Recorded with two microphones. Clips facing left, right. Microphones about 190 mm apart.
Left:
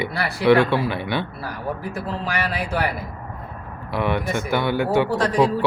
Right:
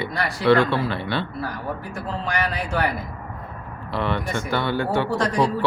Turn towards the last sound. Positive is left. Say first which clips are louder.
# left 3 dB
turn(degrees=5)  # may be behind; listen again after turning